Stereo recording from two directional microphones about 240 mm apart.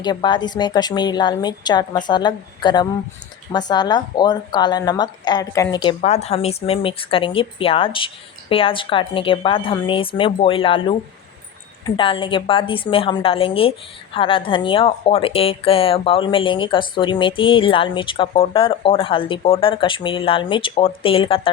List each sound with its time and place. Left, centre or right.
0.0 s a woman's voice: centre
11.9 s a woman's voice: left